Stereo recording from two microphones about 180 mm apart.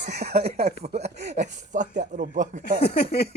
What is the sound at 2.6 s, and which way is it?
Speech, 60° left (ahead or behind).